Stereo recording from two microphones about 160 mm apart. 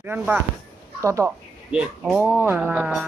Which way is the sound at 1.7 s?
5° right (ahead or behind).